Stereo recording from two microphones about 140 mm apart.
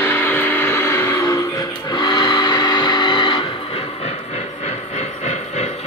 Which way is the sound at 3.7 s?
50° left (ahead or behind).